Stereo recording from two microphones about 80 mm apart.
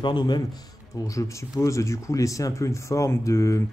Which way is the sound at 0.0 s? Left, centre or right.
Left.